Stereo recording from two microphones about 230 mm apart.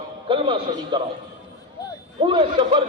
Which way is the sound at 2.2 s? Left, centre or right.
Right.